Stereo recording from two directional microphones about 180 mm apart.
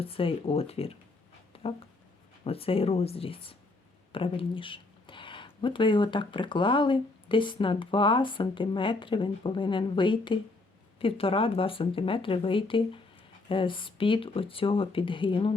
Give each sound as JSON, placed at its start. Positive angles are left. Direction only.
{"t": 0.0, "sound": "speech", "side_deg": 30}
{"t": 1.5, "sound": "a sound", "side_deg": 30}
{"t": 2.4, "sound": "speech", "side_deg": 30}